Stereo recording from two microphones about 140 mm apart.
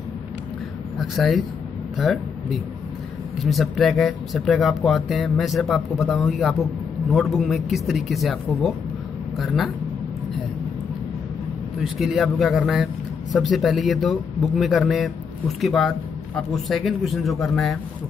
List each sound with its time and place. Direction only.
0.9 s speech: centre (ahead or behind)
11.8 s speech: centre (ahead or behind)